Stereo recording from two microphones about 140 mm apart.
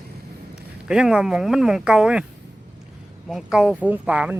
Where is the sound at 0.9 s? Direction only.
5° right (ahead or behind).